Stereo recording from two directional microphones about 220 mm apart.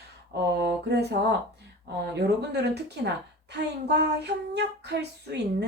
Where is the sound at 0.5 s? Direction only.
45° right (ahead or behind).